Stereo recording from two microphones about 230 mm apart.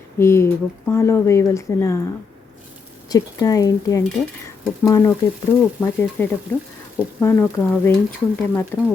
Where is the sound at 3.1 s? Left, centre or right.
Centre.